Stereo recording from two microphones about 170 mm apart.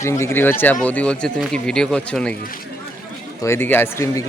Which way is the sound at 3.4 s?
15° left (ahead or behind).